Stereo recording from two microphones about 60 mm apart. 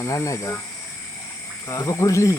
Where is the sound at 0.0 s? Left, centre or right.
Left.